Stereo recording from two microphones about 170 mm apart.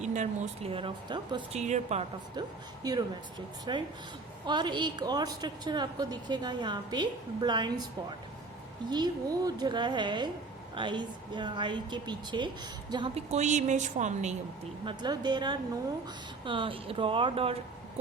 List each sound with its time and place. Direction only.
0.0 s speech: 45° right (ahead or behind)
0.7 s a woman's voice: 30° right (ahead or behind)
1.5 s speech: 40° right (ahead or behind)
2.8 s a woman's voice: 25° right (ahead or behind)
8.9 s a woman's voice: 25° right (ahead or behind)
13.3 s a woman's voice: 45° right (ahead or behind)
14.8 s a woman's voice: 25° right (ahead or behind)